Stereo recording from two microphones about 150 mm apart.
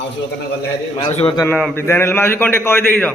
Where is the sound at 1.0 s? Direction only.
35° left (ahead or behind).